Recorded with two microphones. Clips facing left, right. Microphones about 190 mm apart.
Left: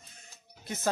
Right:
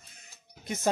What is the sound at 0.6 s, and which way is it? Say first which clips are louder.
Speech: right 3 dB; 15° right (ahead or behind).